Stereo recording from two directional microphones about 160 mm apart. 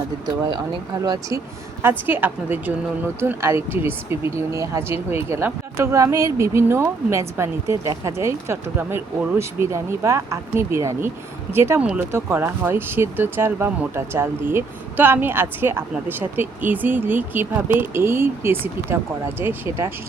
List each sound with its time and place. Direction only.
1.0 s speech: 25° right (ahead or behind)
1.8 s speech: 10° right (ahead or behind)